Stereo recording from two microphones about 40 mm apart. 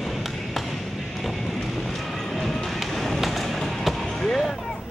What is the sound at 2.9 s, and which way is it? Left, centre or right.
Basketball bounce, centre.